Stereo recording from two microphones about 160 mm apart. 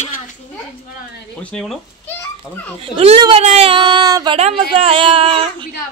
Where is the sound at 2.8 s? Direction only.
35° right (ahead or behind).